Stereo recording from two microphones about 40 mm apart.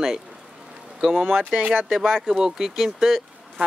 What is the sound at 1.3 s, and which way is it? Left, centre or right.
Speech, right.